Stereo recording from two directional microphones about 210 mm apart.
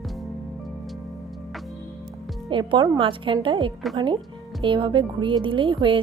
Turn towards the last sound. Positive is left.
turn(degrees=-25)  # may be behind; listen again after turning